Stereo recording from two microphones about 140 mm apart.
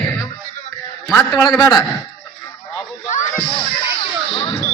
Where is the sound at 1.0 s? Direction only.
25° left (ahead or behind).